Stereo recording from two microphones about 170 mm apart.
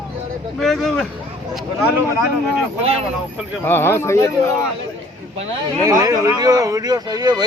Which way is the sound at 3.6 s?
15° left (ahead or behind).